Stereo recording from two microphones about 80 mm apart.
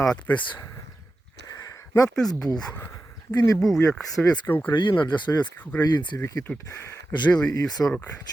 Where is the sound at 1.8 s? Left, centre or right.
Left.